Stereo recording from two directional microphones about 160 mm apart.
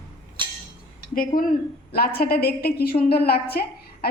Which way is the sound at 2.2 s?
75° left (ahead or behind).